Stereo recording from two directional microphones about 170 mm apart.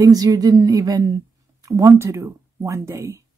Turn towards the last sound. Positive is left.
turn(degrees=-20)  # may be behind; listen again after turning